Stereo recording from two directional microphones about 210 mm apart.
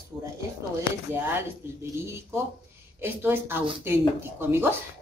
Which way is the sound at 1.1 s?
10° right (ahead or behind).